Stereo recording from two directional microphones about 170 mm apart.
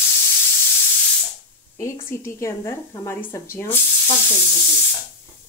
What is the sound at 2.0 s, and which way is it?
Speech, 15° left (ahead or behind).